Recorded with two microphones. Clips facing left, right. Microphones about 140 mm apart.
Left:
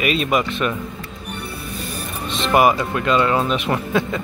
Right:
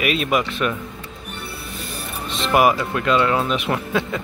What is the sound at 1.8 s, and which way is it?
Music, 50° left (ahead or behind).